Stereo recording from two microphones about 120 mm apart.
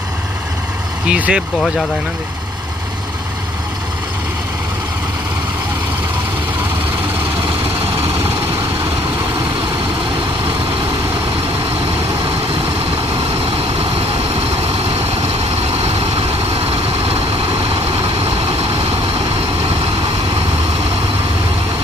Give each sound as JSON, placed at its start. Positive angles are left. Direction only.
{"t": 1.0, "sound": "speech", "side_deg": -10}
{"t": 7.9, "sound": "vehicle", "side_deg": -55}
{"t": 13.4, "sound": "vehicle", "side_deg": -50}